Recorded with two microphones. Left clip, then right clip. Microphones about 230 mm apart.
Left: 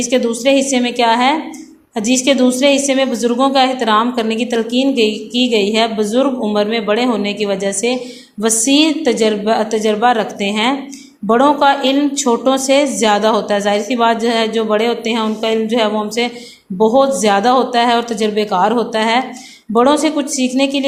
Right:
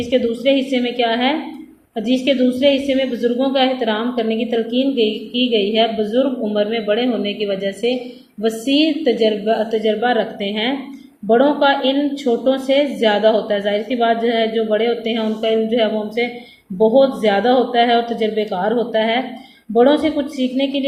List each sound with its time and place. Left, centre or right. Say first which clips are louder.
0.0 s a woman's voice: left 2 dB; left